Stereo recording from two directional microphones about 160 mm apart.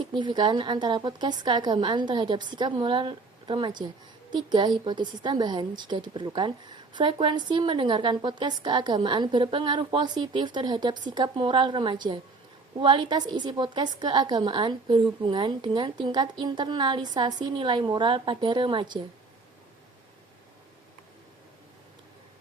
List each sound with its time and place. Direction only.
0.1 s a woman's voice: 30° right (ahead or behind)